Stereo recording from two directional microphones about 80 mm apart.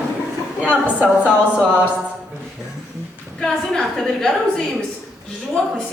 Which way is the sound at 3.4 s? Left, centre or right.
Centre.